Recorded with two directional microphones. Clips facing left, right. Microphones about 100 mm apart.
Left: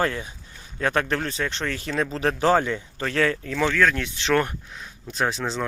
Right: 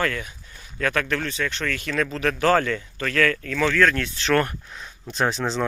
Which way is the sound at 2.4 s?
20° left (ahead or behind).